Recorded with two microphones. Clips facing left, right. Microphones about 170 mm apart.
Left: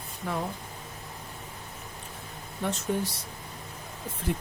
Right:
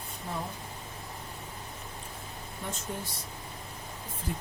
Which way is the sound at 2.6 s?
75° left (ahead or behind).